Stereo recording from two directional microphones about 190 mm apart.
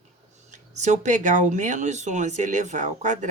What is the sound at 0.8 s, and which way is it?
A woman's voice, 40° right (ahead or behind).